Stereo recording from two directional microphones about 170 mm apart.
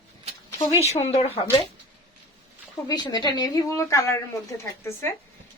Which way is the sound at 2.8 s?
25° left (ahead or behind).